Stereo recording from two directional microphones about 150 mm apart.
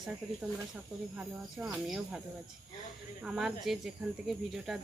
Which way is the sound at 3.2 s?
5° right (ahead or behind).